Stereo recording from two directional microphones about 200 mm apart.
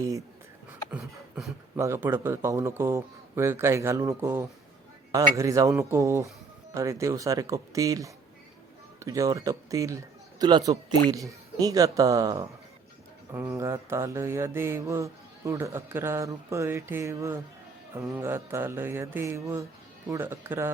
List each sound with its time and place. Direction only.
0.9 s beatboxing: 5° right (ahead or behind)
1.7 s mantra: 15° right (ahead or behind)
10.4 s a man's voice: 20° right (ahead or behind)
11.6 s mantra: 20° right (ahead or behind)